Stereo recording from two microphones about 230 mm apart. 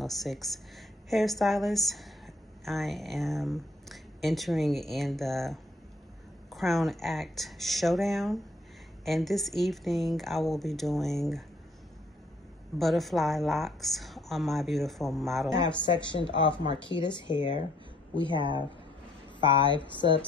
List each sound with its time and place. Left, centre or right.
0.0 s a woman's voice: centre
12.7 s speech: centre
15.8 s speech: left
19.4 s speech: left